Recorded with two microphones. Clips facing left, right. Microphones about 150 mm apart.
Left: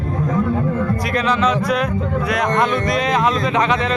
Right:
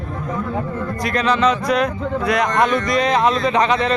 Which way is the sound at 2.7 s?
55° left (ahead or behind).